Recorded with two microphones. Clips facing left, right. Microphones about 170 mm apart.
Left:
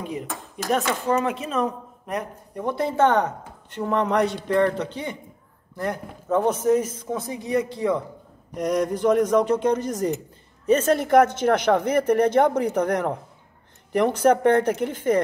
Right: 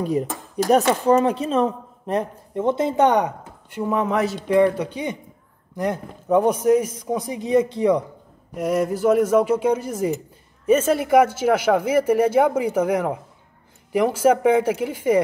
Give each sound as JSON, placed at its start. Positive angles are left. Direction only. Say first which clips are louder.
{"t": 0.0, "sound": "speech", "louder": "right 8 dB", "side_deg": -40}
{"t": 8.5, "sound": "speech", "louder": "right 2 dB", "side_deg": -5}